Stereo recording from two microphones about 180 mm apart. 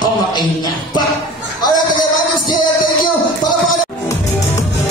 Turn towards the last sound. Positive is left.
turn(degrees=25)  # may be behind; listen again after turning